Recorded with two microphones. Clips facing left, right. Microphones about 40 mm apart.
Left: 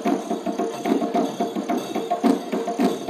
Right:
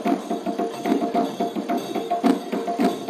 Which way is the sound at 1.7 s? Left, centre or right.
Centre.